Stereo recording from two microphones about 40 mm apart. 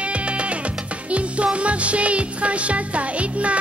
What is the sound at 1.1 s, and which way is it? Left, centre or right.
Music, right.